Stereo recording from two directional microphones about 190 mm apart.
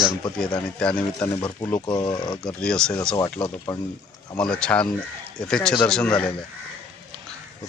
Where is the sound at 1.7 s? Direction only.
20° left (ahead or behind).